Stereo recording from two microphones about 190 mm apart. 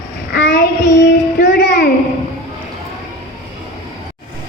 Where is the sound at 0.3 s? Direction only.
65° left (ahead or behind).